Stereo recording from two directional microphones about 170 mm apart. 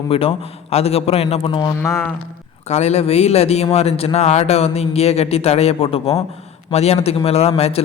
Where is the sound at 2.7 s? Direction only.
40° left (ahead or behind).